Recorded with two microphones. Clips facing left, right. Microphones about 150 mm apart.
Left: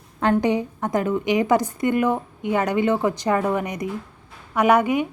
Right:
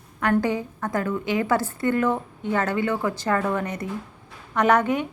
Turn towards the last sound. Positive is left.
turn(degrees=10)  # may be behind; listen again after turning